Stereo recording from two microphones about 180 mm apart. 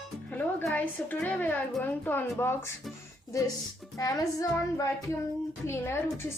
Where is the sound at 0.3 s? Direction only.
10° left (ahead or behind).